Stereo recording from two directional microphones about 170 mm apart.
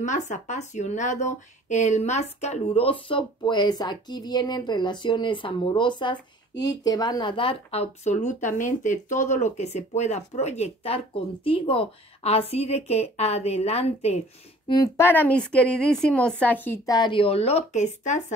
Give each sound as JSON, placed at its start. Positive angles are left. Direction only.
{"t": 0.0, "sound": "speech", "side_deg": 45}
{"t": 14.7, "sound": "a woman's voice", "side_deg": 20}